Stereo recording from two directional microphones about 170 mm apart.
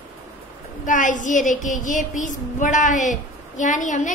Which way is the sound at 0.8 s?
50° left (ahead or behind).